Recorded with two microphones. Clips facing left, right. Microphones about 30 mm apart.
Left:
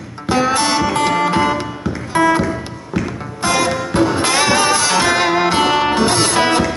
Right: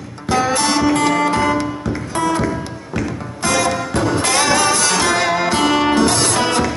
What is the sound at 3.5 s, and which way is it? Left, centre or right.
Music, left.